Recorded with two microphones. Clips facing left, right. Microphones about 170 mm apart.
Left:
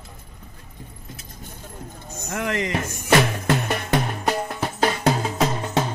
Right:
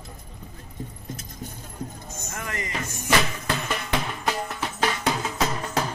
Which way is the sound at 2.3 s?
85° left.